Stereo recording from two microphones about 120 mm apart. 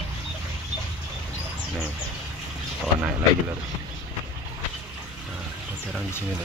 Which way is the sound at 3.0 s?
15° right (ahead or behind).